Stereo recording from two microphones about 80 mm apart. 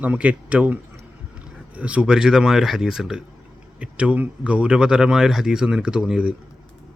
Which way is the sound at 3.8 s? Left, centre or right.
Centre.